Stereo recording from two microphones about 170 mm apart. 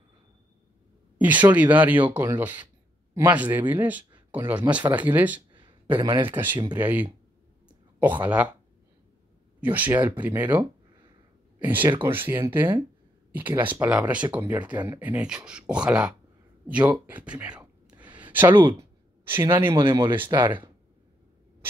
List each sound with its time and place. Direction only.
1.1 s speech: 10° right (ahead or behind)
5.5 s a sound: 30° right (ahead or behind)
6.3 s speech: 10° right (ahead or behind)
8.2 s speech: 10° right (ahead or behind)
9.6 s speech: 10° right (ahead or behind)
11.6 s speech: 10° right (ahead or behind)
13.5 s speech: 10° right (ahead or behind)
14.7 s speech: 25° right (ahead or behind)
15.0 s speech: 10° right (ahead or behind)
18.0 s a sound: 25° right (ahead or behind)
18.3 s speech: 10° right (ahead or behind)